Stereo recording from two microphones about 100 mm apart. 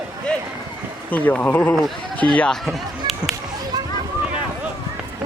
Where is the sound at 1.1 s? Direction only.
15° left (ahead or behind).